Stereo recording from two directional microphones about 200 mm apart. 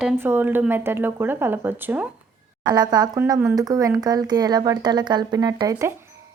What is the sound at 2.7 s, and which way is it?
Speech, 20° right (ahead or behind).